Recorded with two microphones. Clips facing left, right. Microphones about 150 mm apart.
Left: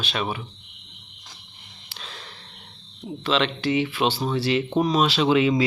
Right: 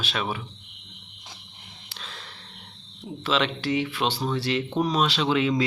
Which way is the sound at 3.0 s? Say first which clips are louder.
Left 2 dB; 5° right (ahead or behind).